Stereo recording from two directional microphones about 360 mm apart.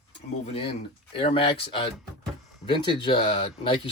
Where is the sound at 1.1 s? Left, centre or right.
Centre.